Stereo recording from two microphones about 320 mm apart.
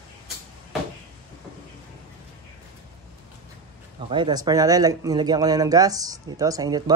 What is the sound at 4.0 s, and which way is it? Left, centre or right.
Speech, centre.